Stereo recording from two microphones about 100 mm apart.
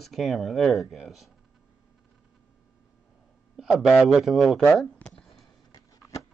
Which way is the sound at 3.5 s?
5° right (ahead or behind).